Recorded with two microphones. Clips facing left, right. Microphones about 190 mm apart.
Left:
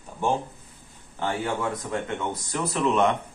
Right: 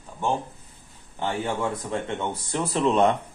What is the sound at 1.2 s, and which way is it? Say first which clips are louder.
A man's voice: even; 20° right (ahead or behind).